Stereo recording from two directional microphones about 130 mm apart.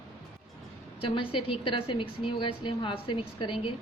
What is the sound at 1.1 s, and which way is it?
A woman's voice, 40° left (ahead or behind).